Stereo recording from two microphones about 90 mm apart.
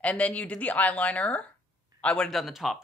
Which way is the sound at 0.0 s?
15° left (ahead or behind).